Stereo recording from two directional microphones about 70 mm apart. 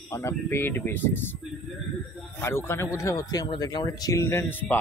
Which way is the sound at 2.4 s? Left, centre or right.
Left.